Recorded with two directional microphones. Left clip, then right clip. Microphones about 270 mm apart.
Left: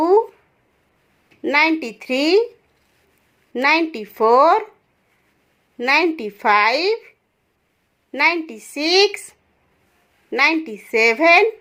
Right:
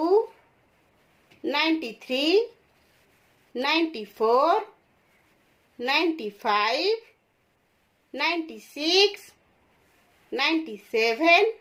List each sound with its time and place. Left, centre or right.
1.4 s a woman's voice: left
3.5 s a woman's voice: left
5.7 s a woman's voice: left
8.1 s a woman's voice: left
10.3 s a woman's voice: left